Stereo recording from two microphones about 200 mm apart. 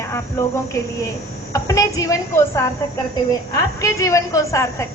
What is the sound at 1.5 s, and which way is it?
Speech, 15° left (ahead or behind).